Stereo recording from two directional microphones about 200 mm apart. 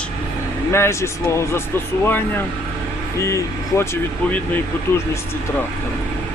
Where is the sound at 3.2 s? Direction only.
15° left (ahead or behind).